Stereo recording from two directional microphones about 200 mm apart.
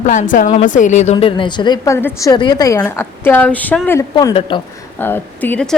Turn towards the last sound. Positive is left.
turn(degrees=5)  # may be behind; listen again after turning